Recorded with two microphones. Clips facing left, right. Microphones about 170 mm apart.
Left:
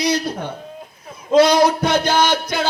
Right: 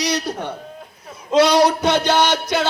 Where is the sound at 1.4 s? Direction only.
75° right (ahead or behind).